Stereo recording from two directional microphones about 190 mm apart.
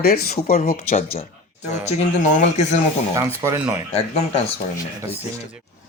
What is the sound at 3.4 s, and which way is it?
Speech, 15° right (ahead or behind).